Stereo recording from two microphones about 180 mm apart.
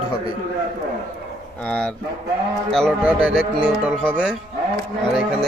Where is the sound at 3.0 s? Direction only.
5° right (ahead or behind).